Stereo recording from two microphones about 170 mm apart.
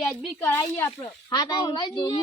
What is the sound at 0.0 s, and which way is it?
Speech, centre (ahead or behind).